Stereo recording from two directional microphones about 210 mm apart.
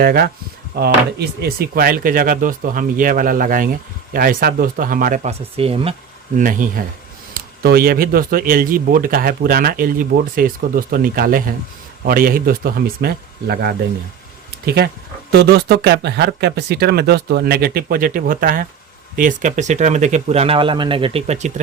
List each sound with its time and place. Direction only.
0.0 s speech: 45° right (ahead or behind); by 5.9 s 25° right (ahead or behind)
6.3 s speech: 40° right (ahead or behind)